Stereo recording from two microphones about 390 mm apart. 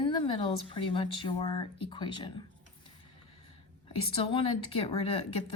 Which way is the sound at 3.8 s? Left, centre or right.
Centre.